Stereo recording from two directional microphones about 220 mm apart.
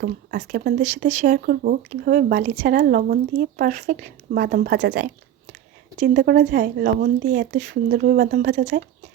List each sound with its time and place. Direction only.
0.0 s speech: 40° right (ahead or behind)
6.0 s speech: 40° right (ahead or behind)